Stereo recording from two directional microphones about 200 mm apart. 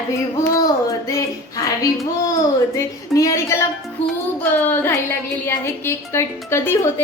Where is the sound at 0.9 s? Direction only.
15° left (ahead or behind).